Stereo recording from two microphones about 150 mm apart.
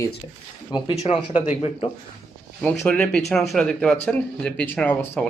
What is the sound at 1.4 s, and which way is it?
Speech, 45° left (ahead or behind).